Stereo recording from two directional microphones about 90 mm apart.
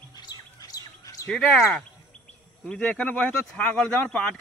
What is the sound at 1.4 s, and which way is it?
Speech, centre (ahead or behind).